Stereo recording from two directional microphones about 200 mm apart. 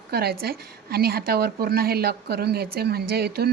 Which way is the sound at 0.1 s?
50° right (ahead or behind).